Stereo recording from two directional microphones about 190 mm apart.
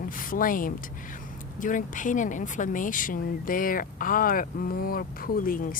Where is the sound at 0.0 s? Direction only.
45° left (ahead or behind).